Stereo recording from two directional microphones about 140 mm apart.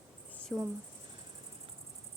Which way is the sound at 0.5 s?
Centre (ahead or behind).